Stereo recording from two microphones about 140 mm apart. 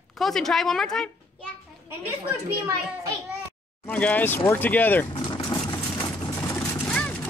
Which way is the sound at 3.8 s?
10° left (ahead or behind).